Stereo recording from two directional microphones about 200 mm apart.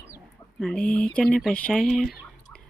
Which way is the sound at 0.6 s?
5° left (ahead or behind).